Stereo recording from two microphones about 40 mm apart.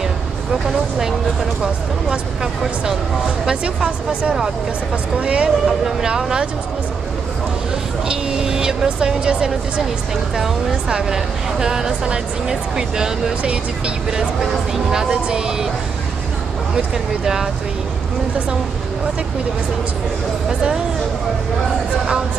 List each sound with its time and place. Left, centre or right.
2.0 s speech: centre
5.2 s speech: right
8.1 s vehicle: centre
8.8 s speech: right
13.4 s speech: right
14.1 s speech: centre
16.7 s speech: centre